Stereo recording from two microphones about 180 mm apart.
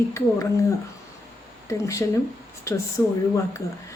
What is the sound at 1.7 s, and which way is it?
Speech, 15° left (ahead or behind).